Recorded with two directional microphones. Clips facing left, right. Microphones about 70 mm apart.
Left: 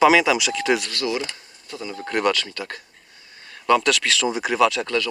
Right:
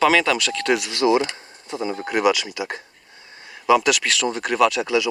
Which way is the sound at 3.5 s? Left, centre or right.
Centre.